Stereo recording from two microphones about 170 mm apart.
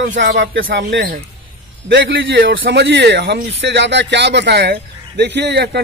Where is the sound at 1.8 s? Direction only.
90° right.